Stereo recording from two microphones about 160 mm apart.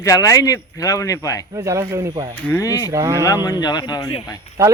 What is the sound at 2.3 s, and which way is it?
Speech, 15° left (ahead or behind).